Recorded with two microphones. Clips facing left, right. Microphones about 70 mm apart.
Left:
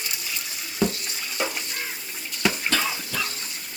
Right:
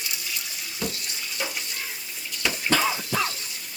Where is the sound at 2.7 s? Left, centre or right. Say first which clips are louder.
Right 3 dB; right.